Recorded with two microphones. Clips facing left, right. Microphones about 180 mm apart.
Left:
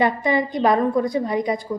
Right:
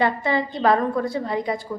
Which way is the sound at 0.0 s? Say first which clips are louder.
Left 2 dB; 15° left (ahead or behind).